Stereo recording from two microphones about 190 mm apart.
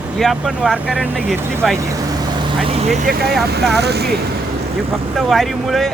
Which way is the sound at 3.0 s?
55° right (ahead or behind).